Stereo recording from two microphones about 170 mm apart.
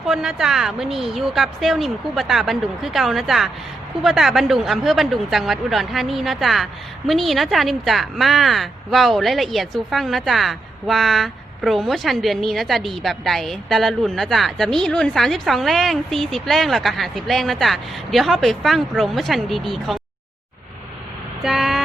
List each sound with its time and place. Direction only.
0.0 s speech: centre (ahead or behind)
21.4 s speech: centre (ahead or behind)